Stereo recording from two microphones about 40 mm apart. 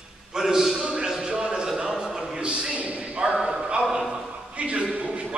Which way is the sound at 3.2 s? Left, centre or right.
Right.